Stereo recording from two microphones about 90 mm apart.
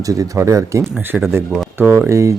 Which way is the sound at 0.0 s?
40° right (ahead or behind).